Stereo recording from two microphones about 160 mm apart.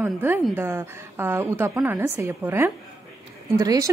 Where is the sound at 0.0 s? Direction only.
15° right (ahead or behind).